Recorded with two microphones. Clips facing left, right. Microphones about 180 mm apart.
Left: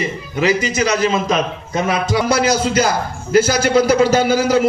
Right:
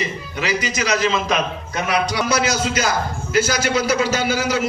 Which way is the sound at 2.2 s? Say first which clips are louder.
Left 4 dB; 50° left (ahead or behind).